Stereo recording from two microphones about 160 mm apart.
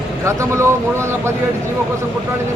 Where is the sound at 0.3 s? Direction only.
15° right (ahead or behind).